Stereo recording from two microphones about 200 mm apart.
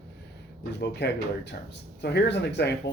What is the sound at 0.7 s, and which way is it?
Speech, 55° left (ahead or behind).